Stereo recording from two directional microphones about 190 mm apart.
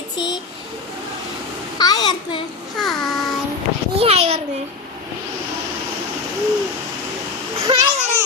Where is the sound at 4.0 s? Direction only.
30° right (ahead or behind).